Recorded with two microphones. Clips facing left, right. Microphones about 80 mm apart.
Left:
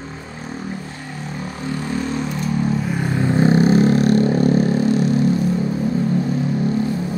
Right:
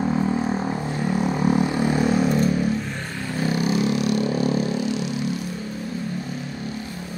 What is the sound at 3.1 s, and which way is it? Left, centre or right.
Vehicle, left.